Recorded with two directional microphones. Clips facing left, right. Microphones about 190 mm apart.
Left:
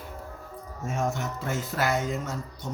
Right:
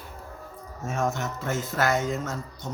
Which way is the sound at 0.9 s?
10° left (ahead or behind).